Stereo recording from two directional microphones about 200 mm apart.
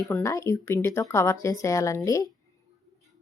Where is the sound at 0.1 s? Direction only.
15° left (ahead or behind).